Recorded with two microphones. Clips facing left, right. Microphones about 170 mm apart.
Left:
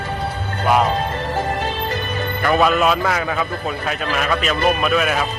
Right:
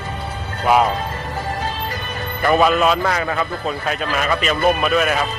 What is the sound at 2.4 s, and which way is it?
Speech, centre (ahead or behind).